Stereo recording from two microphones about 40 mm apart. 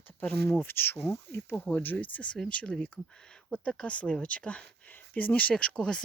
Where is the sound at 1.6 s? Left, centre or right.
Left.